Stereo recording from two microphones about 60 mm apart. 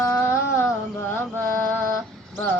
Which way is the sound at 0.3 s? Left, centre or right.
Left.